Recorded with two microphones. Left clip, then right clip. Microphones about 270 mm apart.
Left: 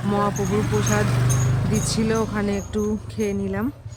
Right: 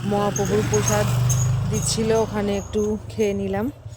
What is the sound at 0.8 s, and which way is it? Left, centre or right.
Speech, right.